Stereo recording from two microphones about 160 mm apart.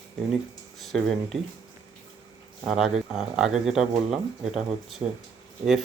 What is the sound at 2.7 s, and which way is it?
Speech, centre (ahead or behind).